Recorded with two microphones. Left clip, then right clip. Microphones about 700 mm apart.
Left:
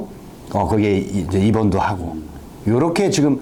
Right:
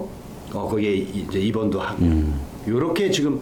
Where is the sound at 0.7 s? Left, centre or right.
Left.